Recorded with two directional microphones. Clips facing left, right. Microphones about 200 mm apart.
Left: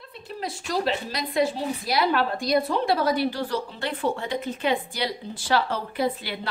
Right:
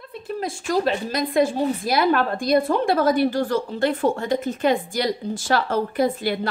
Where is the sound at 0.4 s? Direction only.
50° right (ahead or behind).